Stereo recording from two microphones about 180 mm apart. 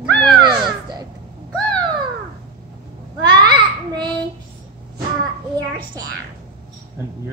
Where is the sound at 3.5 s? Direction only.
25° right (ahead or behind).